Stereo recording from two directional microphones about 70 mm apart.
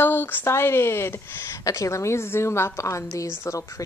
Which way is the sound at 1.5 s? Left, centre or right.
Left.